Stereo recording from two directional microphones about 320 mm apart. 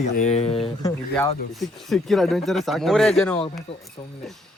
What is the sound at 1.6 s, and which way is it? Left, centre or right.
Speech, centre.